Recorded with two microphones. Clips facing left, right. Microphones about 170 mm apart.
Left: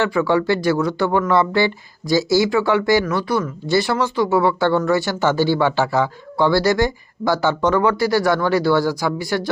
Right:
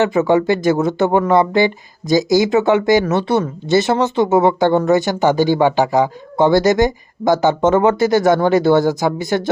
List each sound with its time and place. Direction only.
0.0 s speech: 20° right (ahead or behind)